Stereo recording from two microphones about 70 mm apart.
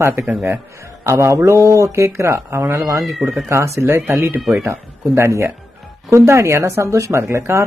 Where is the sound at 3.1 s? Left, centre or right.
Centre.